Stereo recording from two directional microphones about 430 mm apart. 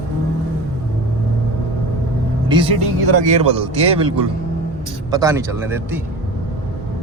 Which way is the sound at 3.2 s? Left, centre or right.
Centre.